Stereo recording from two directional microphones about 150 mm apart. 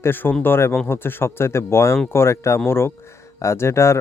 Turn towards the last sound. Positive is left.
turn(degrees=20)  # may be behind; listen again after turning